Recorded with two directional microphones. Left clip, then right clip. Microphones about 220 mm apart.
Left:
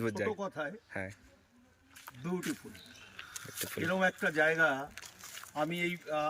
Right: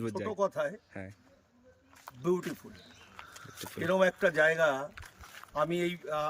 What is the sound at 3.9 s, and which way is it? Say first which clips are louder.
Speech: right 5 dB; 25° right (ahead or behind).